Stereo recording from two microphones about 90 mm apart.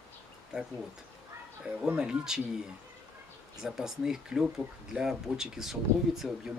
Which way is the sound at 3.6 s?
5° right (ahead or behind).